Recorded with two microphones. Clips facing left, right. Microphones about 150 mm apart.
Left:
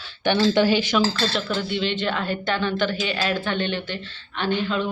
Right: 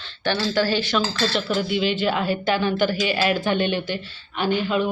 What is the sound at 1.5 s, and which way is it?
A woman's voice, 10° right (ahead or behind).